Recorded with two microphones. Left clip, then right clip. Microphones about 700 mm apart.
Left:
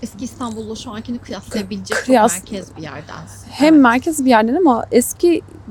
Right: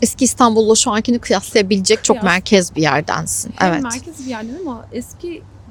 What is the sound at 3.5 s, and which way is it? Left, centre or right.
A woman's voice, left.